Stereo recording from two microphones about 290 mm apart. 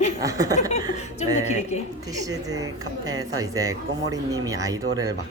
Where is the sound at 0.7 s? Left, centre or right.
Left.